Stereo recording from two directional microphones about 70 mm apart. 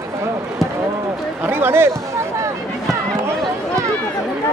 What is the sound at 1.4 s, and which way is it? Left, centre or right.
Speech, right.